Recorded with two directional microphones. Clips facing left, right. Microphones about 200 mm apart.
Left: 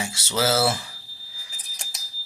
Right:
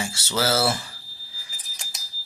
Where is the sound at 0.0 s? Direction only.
15° left (ahead or behind).